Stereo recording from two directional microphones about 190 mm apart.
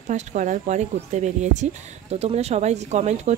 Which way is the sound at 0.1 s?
40° right (ahead or behind).